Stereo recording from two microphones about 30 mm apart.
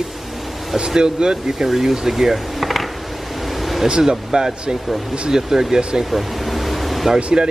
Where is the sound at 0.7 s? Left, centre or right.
Right.